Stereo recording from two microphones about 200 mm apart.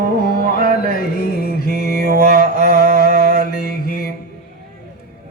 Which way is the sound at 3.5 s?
50° left (ahead or behind).